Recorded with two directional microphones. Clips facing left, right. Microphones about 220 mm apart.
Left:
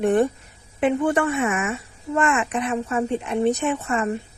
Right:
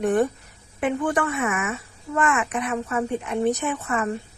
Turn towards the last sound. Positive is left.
turn(degrees=25)  # may be behind; listen again after turning